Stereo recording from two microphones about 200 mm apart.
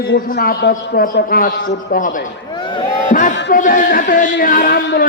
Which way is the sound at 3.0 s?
40° left (ahead or behind).